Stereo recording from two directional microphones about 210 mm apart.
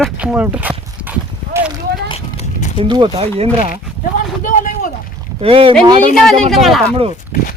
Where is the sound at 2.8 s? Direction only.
25° right (ahead or behind).